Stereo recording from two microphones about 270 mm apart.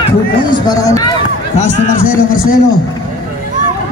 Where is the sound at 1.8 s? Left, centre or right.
Left.